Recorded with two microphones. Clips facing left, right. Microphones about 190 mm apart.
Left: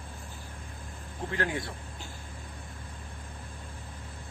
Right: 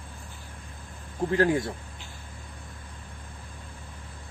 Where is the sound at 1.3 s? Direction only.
40° right (ahead or behind).